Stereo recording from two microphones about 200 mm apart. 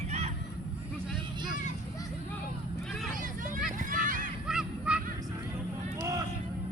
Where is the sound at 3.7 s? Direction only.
40° right (ahead or behind).